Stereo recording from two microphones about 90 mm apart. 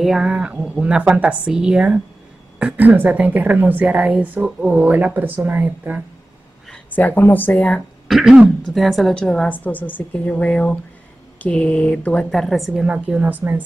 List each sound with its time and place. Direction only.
0.0 s a woman's voice: 10° right (ahead or behind)
6.9 s a woman's voice: 20° left (ahead or behind)
7.5 s speech: 10° left (ahead or behind)
8.1 s a woman's voice: 5° right (ahead or behind)
9.5 s speech: 20° left (ahead or behind)
12.3 s a woman's voice: centre (ahead or behind)
12.8 s a woman's voice: 15° right (ahead or behind)